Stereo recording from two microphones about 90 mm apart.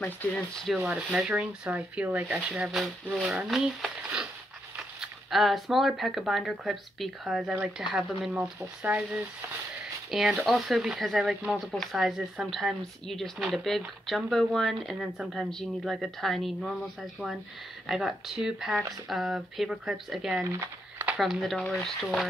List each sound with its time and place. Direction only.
0.3 s speech: 5° left (ahead or behind)
0.7 s speech: 10° right (ahead or behind)
2.4 s speech: 5° right (ahead or behind)
10.1 s speech: 5° right (ahead or behind)
17.8 s speech: 5° right (ahead or behind)